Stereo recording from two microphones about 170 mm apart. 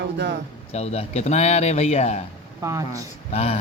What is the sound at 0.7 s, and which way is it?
Speech, 35° left (ahead or behind).